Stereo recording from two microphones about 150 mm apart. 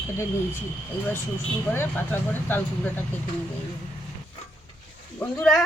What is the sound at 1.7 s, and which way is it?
Speech, 15° left (ahead or behind).